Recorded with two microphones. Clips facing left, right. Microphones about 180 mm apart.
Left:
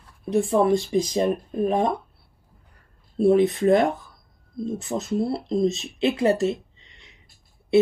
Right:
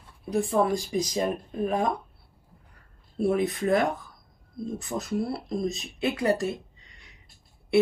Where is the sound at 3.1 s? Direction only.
25° left (ahead or behind).